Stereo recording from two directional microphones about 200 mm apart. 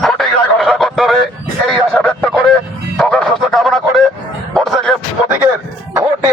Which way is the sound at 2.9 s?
5° left (ahead or behind).